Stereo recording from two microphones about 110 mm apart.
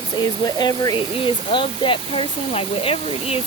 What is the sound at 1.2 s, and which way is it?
Speech, 50° left (ahead or behind).